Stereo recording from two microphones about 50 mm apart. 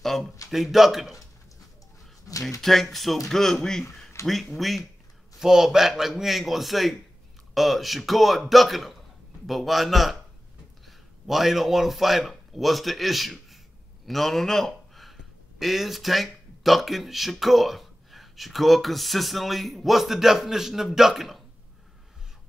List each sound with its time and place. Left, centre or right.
0.0 s a sound: centre
0.5 s speech: centre
2.6 s speech: centre
4.2 s speech: left
4.6 s speech: centre
5.4 s a man's voice: centre